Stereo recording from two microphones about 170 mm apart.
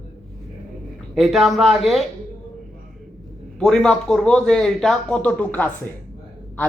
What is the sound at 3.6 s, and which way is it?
Speech, 5° left (ahead or behind).